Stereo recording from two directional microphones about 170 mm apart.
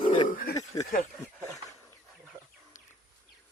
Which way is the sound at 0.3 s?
60° left (ahead or behind).